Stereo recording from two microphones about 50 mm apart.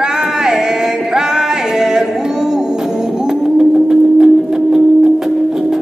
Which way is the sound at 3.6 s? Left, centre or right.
Centre.